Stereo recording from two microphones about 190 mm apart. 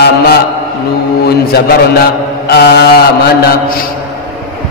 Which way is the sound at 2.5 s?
60° left (ahead or behind).